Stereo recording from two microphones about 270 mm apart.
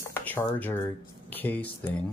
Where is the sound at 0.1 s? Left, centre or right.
Centre.